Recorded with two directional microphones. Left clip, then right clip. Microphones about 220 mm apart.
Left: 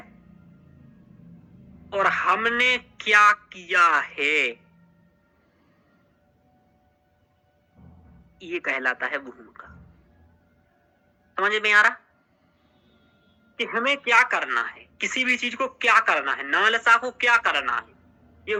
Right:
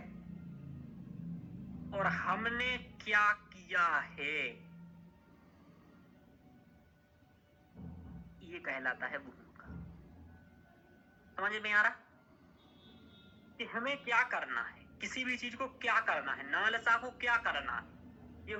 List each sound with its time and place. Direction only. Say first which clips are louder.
1.9 s speech: left 13 dB; 45° left (ahead or behind)
8.5 s speech: left 13 dB; 45° left (ahead or behind)
11.3 s speech: left 13 dB; 45° left (ahead or behind)
13.6 s speech: left 14 dB; 45° left (ahead or behind)